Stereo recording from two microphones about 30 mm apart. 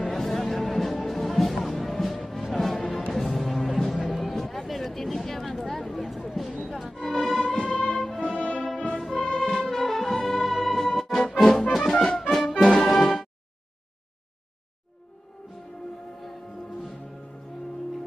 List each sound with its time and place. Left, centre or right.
0.0 s music: centre
7.1 s music: centre
7.4 s music: left
8.2 s music: left
8.9 s music: centre
9.2 s music: left